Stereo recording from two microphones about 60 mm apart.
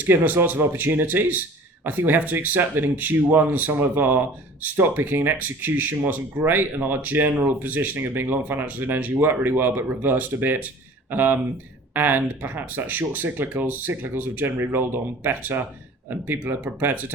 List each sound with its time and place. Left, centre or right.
0.0 s speech: right